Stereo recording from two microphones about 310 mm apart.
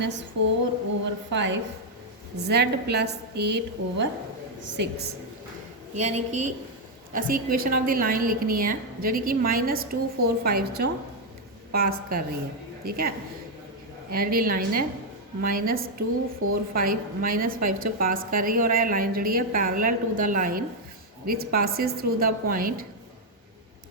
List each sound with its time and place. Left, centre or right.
0.4 s female singing: right
1.3 s a woman's voice: right
16.4 s a woman's voice: right
16.7 s a woman's voice: right